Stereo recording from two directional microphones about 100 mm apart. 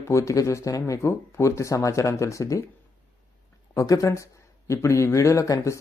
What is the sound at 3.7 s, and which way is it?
Speech, 35° left (ahead or behind).